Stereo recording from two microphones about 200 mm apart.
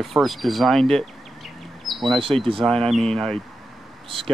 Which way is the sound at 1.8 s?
Centre (ahead or behind).